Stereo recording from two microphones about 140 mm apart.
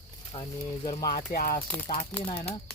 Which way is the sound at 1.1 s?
90° left.